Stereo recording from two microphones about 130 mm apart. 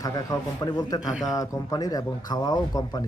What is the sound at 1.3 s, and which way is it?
A man's voice, 25° left (ahead or behind).